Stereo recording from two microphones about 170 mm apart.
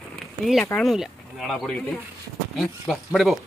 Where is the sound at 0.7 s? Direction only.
Centre (ahead or behind).